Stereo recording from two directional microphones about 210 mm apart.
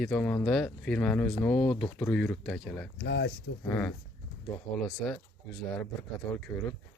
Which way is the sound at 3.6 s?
5° left (ahead or behind).